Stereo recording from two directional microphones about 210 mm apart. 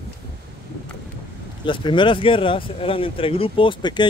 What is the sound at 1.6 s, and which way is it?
Speech, 25° left (ahead or behind).